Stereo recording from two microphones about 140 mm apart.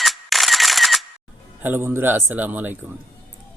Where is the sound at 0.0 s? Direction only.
Centre (ahead or behind).